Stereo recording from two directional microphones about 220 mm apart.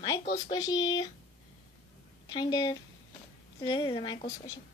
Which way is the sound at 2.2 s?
20° left (ahead or behind).